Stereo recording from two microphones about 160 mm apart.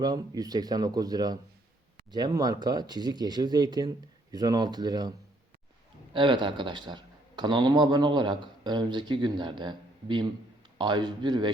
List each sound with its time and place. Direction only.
0.0 s speech: 25° right (ahead or behind)
6.1 s speech: 30° right (ahead or behind)